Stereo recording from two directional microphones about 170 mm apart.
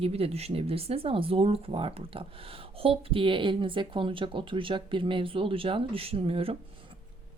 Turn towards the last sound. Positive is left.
turn(degrees=-35)  # may be behind; listen again after turning